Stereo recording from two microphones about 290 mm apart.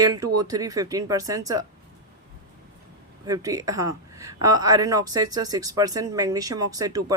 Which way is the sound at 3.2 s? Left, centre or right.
Centre.